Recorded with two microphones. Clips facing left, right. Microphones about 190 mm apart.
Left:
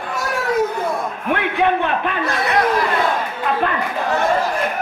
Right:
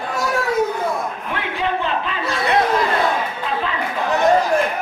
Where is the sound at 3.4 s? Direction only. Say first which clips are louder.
Left 4 dB; 55° left (ahead or behind).